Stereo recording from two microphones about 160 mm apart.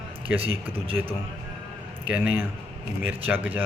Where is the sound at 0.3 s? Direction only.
35° right (ahead or behind).